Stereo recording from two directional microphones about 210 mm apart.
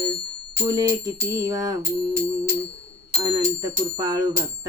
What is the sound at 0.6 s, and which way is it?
Speech, 15° right (ahead or behind).